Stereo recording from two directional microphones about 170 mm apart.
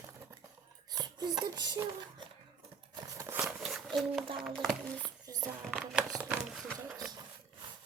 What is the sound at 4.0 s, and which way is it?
Speech, centre (ahead or behind).